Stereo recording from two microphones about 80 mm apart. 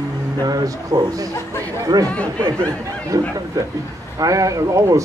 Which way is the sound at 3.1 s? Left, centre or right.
Right.